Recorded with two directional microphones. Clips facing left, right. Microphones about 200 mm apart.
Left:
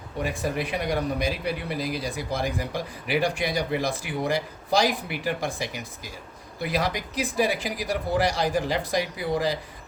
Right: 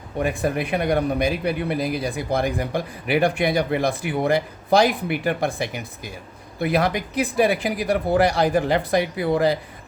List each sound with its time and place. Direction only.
0.2 s speech: 55° right (ahead or behind)